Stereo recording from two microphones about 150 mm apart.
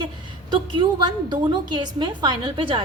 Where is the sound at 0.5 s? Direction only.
30° right (ahead or behind).